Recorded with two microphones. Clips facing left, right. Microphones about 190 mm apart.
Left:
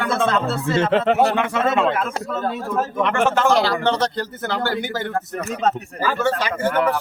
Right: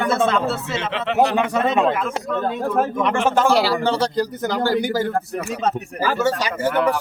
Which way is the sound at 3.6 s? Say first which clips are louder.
Even; 10° right (ahead or behind).